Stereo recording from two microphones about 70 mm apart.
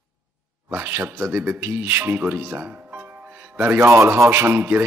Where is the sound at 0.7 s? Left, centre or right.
Right.